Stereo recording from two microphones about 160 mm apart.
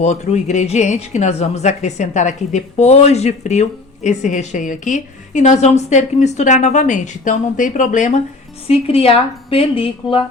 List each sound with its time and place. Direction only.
0.0 s speech: 45° left (ahead or behind)
8.6 s a woman's voice: 40° left (ahead or behind)